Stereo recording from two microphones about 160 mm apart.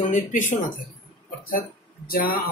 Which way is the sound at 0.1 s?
55° left (ahead or behind).